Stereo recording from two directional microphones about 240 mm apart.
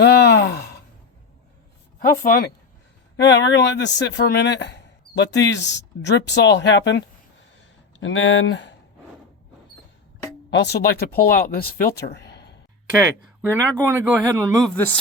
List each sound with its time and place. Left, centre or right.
0.0 s a sound: left
2.0 s speech: left
8.0 s speech: left
10.5 s speech: left
11.9 s a sound: left
13.4 s speech: centre
14.6 s speech: centre